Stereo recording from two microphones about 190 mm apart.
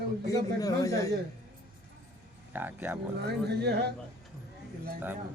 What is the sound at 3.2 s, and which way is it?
Speech, 60° right (ahead or behind).